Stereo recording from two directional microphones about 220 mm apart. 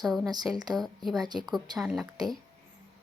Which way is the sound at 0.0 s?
Centre (ahead or behind).